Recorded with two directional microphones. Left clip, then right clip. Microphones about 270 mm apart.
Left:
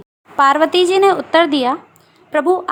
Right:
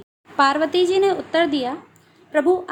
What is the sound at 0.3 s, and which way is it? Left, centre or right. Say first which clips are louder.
A woman's voice: left 5 dB; left.